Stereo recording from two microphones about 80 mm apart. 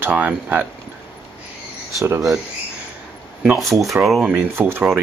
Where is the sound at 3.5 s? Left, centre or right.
Centre.